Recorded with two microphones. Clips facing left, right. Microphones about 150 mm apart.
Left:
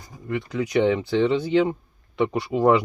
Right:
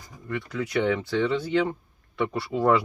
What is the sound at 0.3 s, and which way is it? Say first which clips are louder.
Speech: left 4 dB; 20° left (ahead or behind).